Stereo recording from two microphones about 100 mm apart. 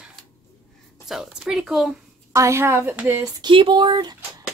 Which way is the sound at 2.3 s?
30° right (ahead or behind).